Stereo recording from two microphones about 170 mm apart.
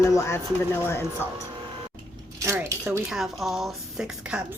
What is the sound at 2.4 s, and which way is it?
Speech, 15° right (ahead or behind).